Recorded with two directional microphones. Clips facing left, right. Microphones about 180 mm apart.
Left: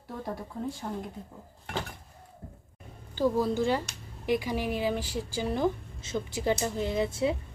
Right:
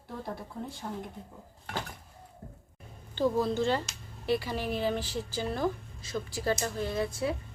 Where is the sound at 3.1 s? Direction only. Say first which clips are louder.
Left 1 dB; 10° left (ahead or behind).